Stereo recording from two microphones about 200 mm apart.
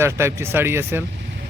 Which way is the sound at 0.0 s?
15° right (ahead or behind).